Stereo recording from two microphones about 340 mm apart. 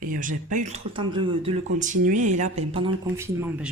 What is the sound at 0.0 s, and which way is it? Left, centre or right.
Speech, right.